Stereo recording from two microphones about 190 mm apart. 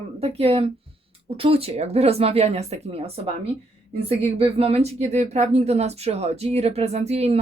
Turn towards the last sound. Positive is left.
turn(degrees=-35)  # may be behind; listen again after turning